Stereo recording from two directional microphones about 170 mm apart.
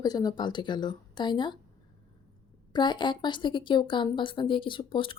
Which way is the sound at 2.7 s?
25° left (ahead or behind).